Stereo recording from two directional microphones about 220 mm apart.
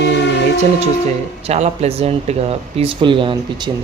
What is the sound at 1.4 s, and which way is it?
Speech, 30° right (ahead or behind).